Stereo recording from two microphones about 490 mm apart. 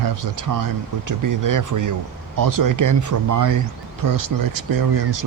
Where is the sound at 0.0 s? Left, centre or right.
Right.